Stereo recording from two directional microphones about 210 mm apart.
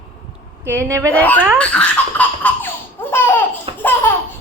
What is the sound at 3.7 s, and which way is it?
Laughter, 25° right (ahead or behind).